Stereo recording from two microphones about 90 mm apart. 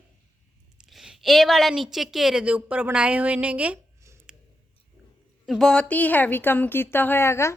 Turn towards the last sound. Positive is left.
turn(degrees=30)  # may be behind; listen again after turning